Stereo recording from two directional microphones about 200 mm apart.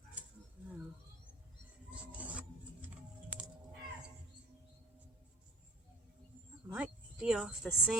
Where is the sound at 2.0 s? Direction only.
5° right (ahead or behind).